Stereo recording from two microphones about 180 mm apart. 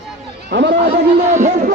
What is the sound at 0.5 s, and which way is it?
Speech, 75° right (ahead or behind).